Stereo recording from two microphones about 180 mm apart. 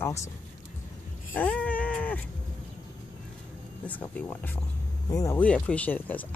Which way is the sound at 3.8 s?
10° left (ahead or behind).